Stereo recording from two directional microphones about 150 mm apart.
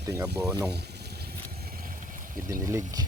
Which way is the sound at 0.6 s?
90° right.